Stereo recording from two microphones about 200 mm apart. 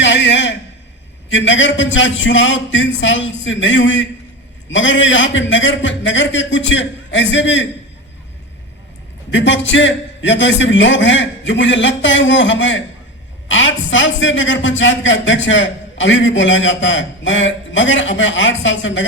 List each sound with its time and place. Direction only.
0.0 s a sound: 65° left (ahead or behind)
1.3 s a man's voice: 65° left (ahead or behind)
9.3 s a man's voice: 65° left (ahead or behind)